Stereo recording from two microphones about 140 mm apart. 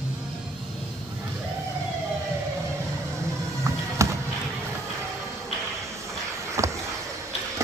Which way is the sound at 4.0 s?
20° right (ahead or behind).